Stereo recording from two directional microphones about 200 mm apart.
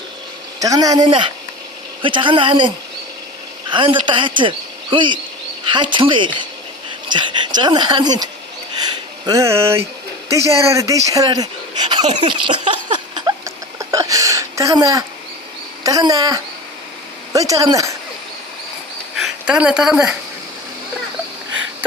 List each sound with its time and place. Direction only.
0.6 s speech: 15° right (ahead or behind)
12.6 s a sound: 25° right (ahead or behind)
15.8 s speech: 20° right (ahead or behind)
19.1 s speech: 5° right (ahead or behind)